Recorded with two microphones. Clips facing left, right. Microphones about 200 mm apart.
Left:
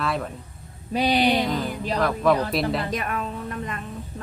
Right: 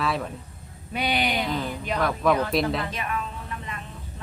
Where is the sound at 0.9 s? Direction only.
35° left (ahead or behind).